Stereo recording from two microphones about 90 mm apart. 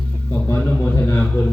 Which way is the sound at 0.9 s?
25° left (ahead or behind).